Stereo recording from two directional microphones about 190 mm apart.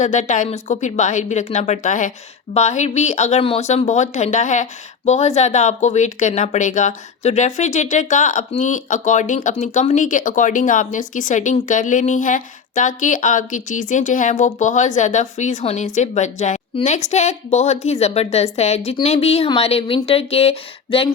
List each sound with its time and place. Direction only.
0.0 s speech: 40° left (ahead or behind)